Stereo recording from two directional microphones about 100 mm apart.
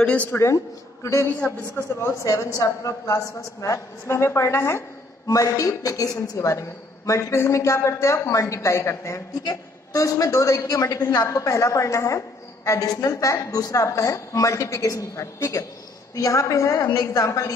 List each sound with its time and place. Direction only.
0.0 s speech: 15° left (ahead or behind)
1.4 s speech: 15° left (ahead or behind)
2.0 s a woman's voice: 30° left (ahead or behind)
5.2 s a woman's voice: 35° left (ahead or behind)
9.4 s a woman's voice: 40° left (ahead or behind)
16.8 s a woman's voice: 45° left (ahead or behind)
17.1 s a woman's voice: 35° left (ahead or behind)